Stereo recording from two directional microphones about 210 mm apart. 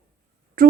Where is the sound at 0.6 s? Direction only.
45° right (ahead or behind).